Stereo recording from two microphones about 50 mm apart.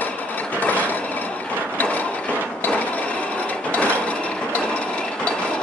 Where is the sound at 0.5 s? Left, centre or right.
Left.